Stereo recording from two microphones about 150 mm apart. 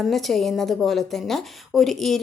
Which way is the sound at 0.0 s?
Centre (ahead or behind).